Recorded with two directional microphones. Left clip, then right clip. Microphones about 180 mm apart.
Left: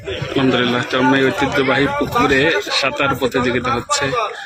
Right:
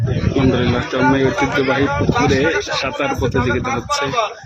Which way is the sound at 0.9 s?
10° right (ahead or behind).